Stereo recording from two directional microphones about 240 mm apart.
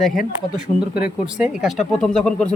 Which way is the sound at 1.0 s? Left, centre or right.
Left.